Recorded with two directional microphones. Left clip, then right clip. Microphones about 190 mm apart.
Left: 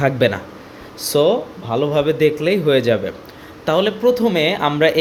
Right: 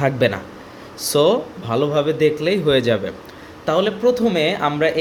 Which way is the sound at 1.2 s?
10° right (ahead or behind).